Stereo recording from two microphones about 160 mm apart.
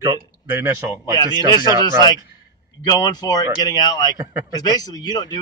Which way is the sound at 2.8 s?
25° left (ahead or behind).